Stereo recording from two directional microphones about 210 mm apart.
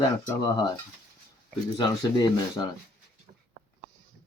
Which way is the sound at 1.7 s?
20° left (ahead or behind).